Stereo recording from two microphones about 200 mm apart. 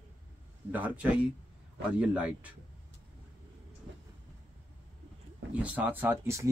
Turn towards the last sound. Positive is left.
turn(degrees=-10)  # may be behind; listen again after turning